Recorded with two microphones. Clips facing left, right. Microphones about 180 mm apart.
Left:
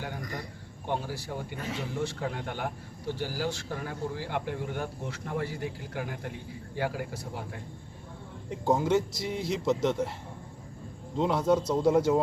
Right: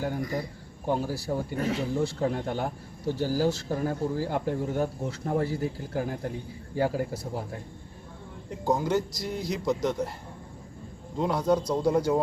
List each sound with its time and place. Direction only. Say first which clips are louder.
0.2 s a man's voice: right 7 dB; 5° right (ahead or behind)
0.9 s speech: right 5 dB; 40° right (ahead or behind)
8.7 s a man's voice: left 1 dB; 5° left (ahead or behind)
11.2 s a man's voice: even; centre (ahead or behind)